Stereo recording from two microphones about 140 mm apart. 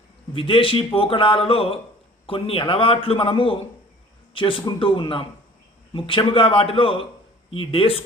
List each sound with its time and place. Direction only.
0.3 s a man's voice: 40° left (ahead or behind)